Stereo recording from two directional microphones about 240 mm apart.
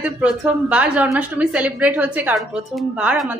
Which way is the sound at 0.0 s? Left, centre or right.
Centre.